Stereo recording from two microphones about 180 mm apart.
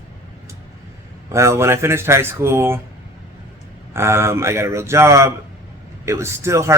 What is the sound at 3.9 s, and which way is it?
Speech, 15° right (ahead or behind).